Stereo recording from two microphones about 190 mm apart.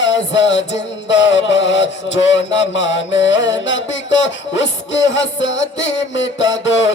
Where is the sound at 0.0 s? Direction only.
75° left (ahead or behind).